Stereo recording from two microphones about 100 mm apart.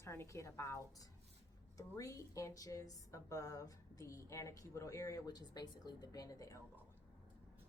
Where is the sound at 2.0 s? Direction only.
35° left (ahead or behind).